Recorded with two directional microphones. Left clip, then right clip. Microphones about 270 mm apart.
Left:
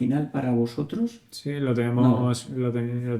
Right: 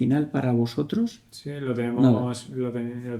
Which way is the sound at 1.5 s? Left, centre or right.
Left.